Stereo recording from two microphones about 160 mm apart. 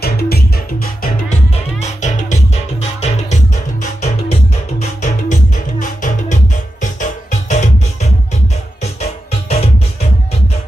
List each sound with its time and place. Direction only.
0.0 s music: 75° left (ahead or behind)
1.3 s music: 45° left (ahead or behind)